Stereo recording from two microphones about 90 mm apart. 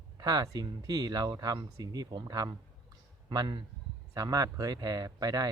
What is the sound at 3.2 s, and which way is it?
Speech, 55° right (ahead or behind).